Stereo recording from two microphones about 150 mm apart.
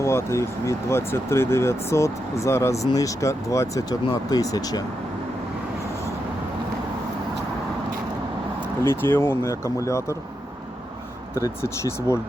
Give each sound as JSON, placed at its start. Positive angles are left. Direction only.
{"t": 0.0, "sound": "speech", "side_deg": 20}
{"t": 9.0, "sound": "speech", "side_deg": 15}
{"t": 11.3, "sound": "speech", "side_deg": 20}